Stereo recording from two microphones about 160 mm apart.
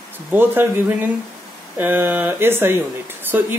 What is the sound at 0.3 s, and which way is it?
Speech, 15° right (ahead or behind).